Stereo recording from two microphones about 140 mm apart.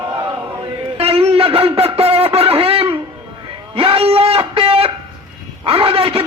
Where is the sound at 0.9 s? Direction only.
45° right (ahead or behind).